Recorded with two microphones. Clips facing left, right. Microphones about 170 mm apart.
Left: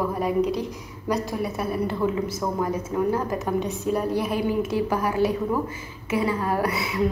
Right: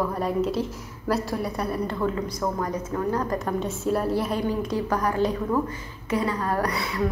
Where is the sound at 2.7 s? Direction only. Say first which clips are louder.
Left 2 dB; 10° left (ahead or behind).